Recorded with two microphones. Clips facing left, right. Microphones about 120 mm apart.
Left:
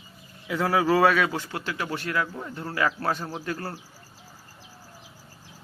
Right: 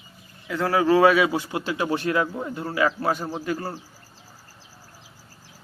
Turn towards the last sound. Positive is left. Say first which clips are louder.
# right 4 dB
turn(degrees=-5)  # may be behind; listen again after turning